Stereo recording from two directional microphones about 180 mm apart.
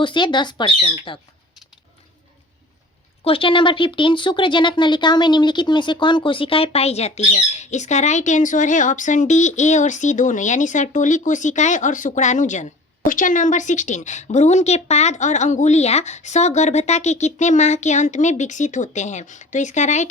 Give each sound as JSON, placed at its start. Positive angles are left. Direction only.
{"t": 0.0, "sound": "speech", "side_deg": 25}
{"t": 3.2, "sound": "a woman's voice", "side_deg": 30}